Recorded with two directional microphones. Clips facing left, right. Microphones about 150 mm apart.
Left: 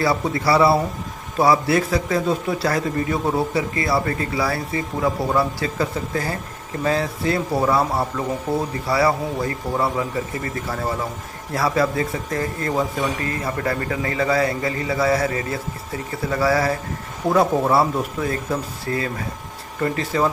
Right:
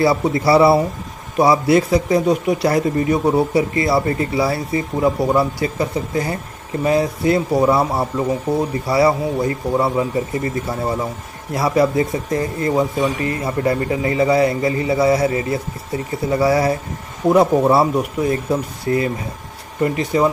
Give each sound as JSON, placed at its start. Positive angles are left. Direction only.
{"t": 0.2, "sound": "a man's voice", "side_deg": -25}